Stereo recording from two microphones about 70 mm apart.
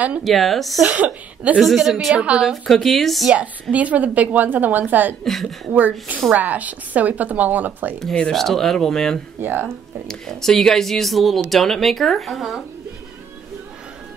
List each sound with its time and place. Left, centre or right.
0.2 s speech: centre
0.8 s a woman's voice: centre
1.6 s speech: centre
2.1 s a woman's voice: centre
2.4 s speech: centre
3.7 s a woman's voice: right
5.2 s speech: centre
5.7 s a woman's voice: right
8.0 s speech: centre
9.4 s a woman's voice: right
10.0 s speech: centre